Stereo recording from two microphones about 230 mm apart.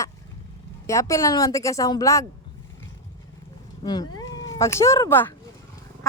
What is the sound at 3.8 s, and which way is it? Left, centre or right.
A woman's voice, centre.